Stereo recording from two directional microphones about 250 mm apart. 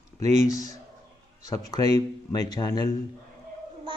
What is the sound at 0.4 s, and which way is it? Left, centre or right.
Speech, centre.